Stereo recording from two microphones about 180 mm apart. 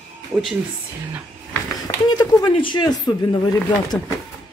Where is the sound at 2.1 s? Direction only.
20° left (ahead or behind).